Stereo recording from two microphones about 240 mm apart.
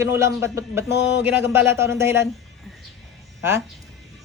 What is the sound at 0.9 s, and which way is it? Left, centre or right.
Speech, left.